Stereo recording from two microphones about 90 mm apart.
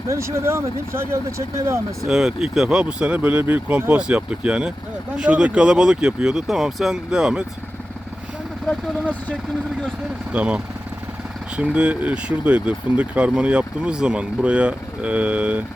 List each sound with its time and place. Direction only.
0.1 s speech: 30° right (ahead or behind)
2.0 s speech: 5° right (ahead or behind)
10.3 s speech: 15° right (ahead or behind)